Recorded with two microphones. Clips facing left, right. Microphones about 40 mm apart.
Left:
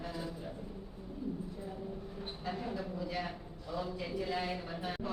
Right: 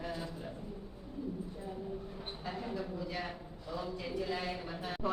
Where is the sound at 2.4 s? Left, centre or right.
Centre.